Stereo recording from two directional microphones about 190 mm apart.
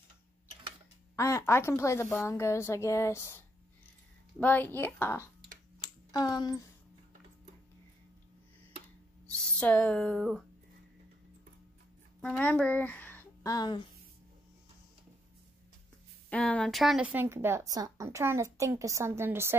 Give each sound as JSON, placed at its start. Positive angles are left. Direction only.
{"t": 1.1, "sound": "speech", "side_deg": 15}
{"t": 5.8, "sound": "a sound", "side_deg": 20}
{"t": 9.6, "sound": "speech", "side_deg": 5}
{"t": 12.2, "sound": "speech", "side_deg": 5}
{"t": 16.3, "sound": "speech", "side_deg": 5}